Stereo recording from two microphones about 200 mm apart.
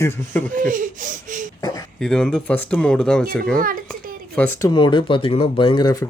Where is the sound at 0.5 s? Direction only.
40° right (ahead or behind).